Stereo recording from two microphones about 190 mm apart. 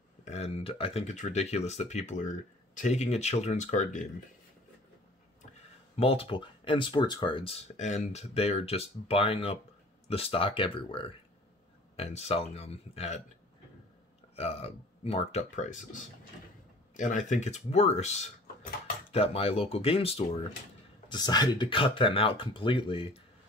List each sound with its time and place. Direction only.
0.2 s speech: 35° left (ahead or behind)
5.9 s speech: 30° left (ahead or behind)
7.7 s speech: 40° left (ahead or behind)
14.3 s speech: 35° left (ahead or behind)